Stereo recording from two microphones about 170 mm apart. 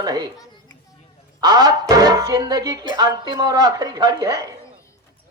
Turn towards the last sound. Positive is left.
turn(degrees=-20)  # may be behind; listen again after turning